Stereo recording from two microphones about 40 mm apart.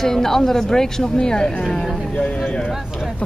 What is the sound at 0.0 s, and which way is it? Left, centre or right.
Speech, centre.